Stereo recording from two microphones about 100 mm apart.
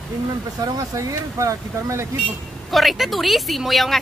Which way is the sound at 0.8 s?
35° right (ahead or behind).